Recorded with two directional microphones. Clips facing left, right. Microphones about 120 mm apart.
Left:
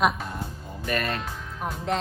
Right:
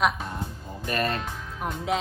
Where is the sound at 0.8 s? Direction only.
35° right (ahead or behind).